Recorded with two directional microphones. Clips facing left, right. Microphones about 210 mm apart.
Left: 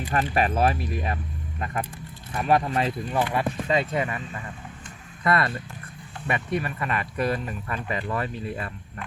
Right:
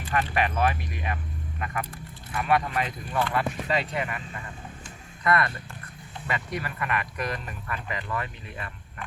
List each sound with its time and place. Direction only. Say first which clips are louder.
0.1 s speech: left 2 dB; 35° left (ahead or behind)
3.2 s speech: even; 15° left (ahead or behind)
5.2 s speech: left 1 dB; 30° left (ahead or behind)